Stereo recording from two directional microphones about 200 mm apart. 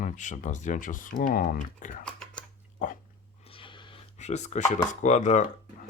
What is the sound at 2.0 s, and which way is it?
Scissors, 5° left (ahead or behind).